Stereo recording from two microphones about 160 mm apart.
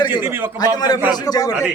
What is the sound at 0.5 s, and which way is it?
A man's voice, 25° left (ahead or behind).